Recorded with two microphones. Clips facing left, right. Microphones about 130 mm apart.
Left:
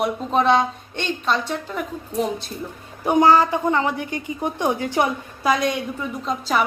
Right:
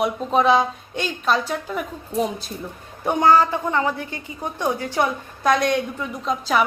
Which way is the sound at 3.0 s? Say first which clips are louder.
Left 1 dB; 10° left (ahead or behind).